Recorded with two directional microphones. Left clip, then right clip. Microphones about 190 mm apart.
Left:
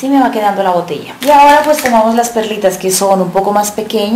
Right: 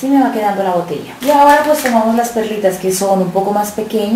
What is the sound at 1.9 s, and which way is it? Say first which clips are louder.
A woman's voice: left 4 dB; 15° left (ahead or behind).